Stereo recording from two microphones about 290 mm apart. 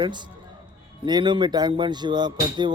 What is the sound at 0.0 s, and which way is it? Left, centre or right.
Speech, centre.